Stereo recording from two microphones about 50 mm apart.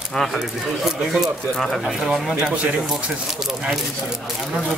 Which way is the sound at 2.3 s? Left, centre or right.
Right.